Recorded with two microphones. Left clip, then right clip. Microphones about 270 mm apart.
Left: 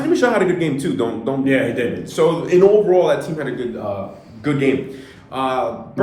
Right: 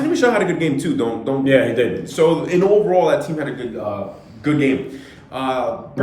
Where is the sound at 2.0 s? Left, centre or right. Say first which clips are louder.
Left 2 dB; centre.